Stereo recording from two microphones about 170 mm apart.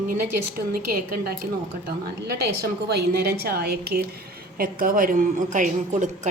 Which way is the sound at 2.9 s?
70° right (ahead or behind).